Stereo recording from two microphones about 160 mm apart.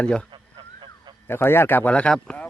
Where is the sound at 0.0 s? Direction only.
5° left (ahead or behind).